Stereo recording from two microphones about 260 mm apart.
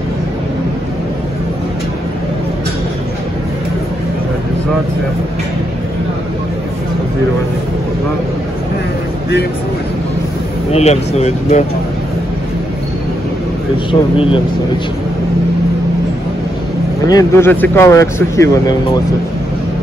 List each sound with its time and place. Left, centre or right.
10.7 s speech: left
14.1 s speech: left
17.1 s speech: centre